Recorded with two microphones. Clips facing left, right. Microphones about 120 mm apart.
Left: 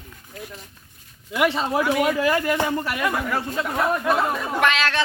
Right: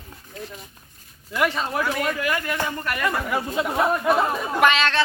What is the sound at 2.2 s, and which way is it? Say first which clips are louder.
Speech: left 5 dB; 30° left (ahead or behind).